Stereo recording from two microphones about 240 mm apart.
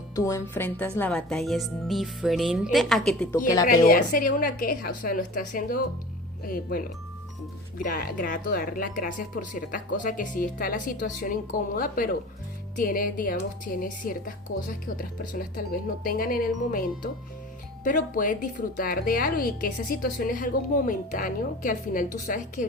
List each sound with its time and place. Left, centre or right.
0.3 s speech: centre
3.7 s speech: left
15.3 s speech: left